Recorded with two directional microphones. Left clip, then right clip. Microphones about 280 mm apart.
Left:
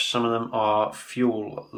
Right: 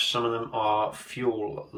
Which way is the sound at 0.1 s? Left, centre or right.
Centre.